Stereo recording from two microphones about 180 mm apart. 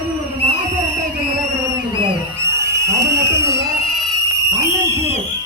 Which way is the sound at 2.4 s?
15° right (ahead or behind).